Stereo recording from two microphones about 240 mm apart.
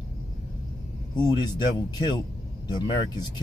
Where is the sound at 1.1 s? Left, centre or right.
Centre.